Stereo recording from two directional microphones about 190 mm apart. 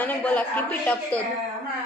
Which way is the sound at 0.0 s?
10° left (ahead or behind).